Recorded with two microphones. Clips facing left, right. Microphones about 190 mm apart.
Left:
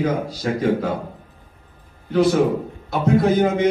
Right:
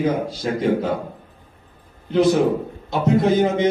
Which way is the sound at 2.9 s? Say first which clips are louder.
Even; 20° right (ahead or behind).